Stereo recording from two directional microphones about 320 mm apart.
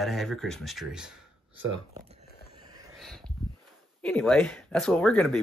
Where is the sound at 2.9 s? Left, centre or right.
Centre.